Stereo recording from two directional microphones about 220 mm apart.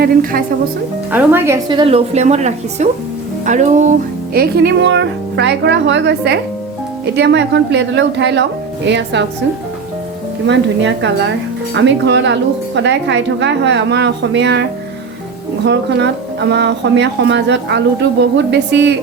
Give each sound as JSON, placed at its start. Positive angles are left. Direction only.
{"t": 0.0, "sound": "music", "side_deg": -40}
{"t": 1.1, "sound": "a woman's voice", "side_deg": -10}
{"t": 3.4, "sound": "music", "side_deg": -35}
{"t": 4.4, "sound": "speech", "side_deg": -45}
{"t": 10.4, "sound": "speech", "side_deg": -55}
{"t": 15.6, "sound": "speech", "side_deg": -50}